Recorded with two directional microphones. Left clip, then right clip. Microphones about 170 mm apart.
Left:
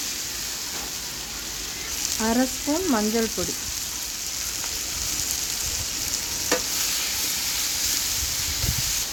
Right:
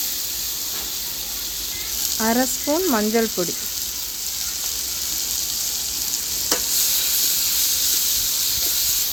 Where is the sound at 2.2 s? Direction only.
40° right (ahead or behind).